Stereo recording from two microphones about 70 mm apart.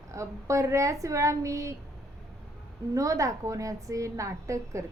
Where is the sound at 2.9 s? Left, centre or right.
Right.